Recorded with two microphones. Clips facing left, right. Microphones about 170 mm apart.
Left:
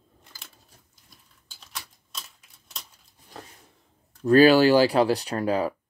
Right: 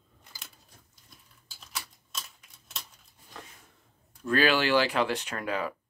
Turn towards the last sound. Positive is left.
turn(degrees=35)  # may be behind; listen again after turning